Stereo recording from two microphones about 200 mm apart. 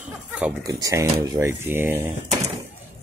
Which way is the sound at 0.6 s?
15° right (ahead or behind).